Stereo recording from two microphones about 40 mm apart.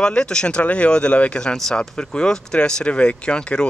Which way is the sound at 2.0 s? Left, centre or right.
Left.